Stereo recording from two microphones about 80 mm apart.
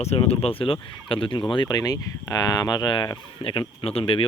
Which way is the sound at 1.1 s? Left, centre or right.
Left.